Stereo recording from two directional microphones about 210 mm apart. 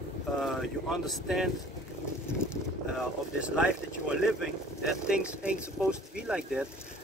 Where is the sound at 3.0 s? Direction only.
5° right (ahead or behind).